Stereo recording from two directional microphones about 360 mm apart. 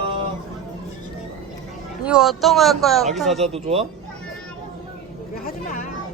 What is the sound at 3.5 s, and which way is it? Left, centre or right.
Speech, centre.